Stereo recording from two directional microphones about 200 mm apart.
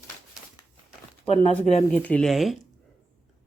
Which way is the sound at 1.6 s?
35° left (ahead or behind).